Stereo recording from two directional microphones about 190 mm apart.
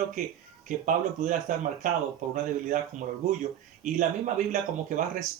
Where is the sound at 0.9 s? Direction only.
45° right (ahead or behind).